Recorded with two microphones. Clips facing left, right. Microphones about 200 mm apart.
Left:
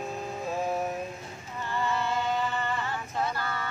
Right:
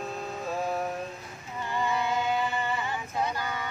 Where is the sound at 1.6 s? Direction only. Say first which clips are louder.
Right 1 dB; 15° right (ahead or behind).